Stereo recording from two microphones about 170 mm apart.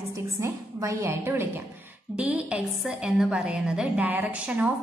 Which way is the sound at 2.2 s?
5° right (ahead or behind).